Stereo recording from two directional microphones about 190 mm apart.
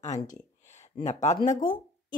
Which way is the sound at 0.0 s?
40° left (ahead or behind).